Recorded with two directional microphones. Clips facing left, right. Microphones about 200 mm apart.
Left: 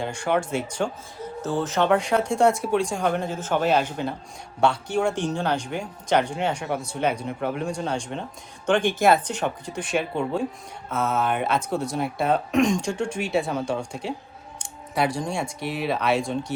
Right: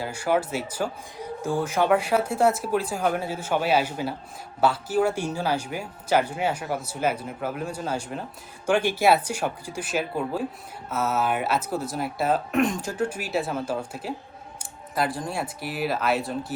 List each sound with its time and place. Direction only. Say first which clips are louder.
0.0 s speech: even; 5° right (ahead or behind)